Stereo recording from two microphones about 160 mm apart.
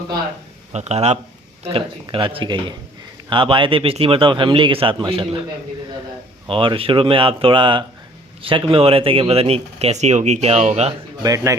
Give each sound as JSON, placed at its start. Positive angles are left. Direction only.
{"t": 0.7, "sound": "speech", "side_deg": -45}
{"t": 6.5, "sound": "speech", "side_deg": -35}
{"t": 11.2, "sound": "a man's voice", "side_deg": -20}